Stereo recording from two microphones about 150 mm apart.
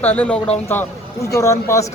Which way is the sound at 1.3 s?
20° left (ahead or behind).